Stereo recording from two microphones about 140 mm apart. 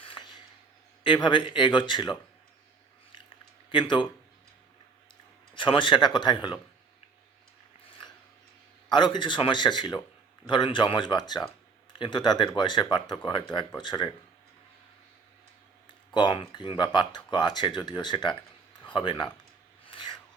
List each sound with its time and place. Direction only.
0.0 s a sound: 35° left (ahead or behind)
1.0 s speech: 35° left (ahead or behind)
3.7 s speech: 35° left (ahead or behind)
5.5 s speech: 35° left (ahead or behind)
8.9 s speech: 35° left (ahead or behind)
16.1 s speech: 35° left (ahead or behind)